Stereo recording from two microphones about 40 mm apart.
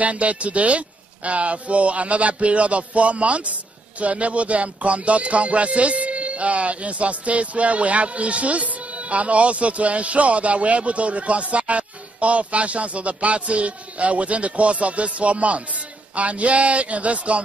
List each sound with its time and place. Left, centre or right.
0.0 s speech: right